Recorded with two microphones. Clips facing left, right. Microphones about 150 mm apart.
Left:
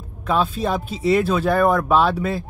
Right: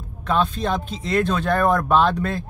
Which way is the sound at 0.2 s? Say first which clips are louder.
Left 1 dB; 5° left (ahead or behind).